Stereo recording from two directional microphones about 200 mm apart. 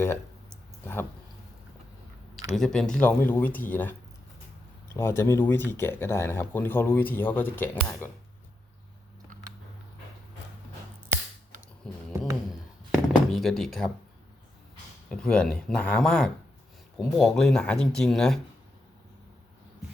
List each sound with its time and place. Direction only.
2.6 s speech: centre (ahead or behind)
4.9 s speech: 10° left (ahead or behind)
11.9 s a sound: 5° left (ahead or behind)
15.1 s speech: 5° left (ahead or behind)